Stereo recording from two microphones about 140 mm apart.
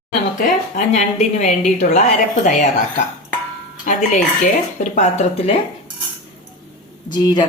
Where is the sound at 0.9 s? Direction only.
55° left (ahead or behind).